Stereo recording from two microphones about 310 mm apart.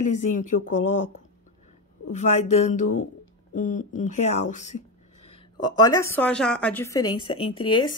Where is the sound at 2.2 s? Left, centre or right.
Left.